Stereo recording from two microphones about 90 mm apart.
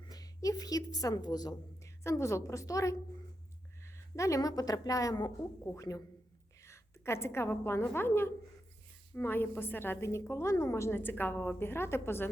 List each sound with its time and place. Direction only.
0.0 s a sound: 45° left (ahead or behind)
2.0 s a woman's voice: 30° left (ahead or behind); by 5.3 s 50° left (ahead or behind)
5.6 s a woman's voice: 35° left (ahead or behind)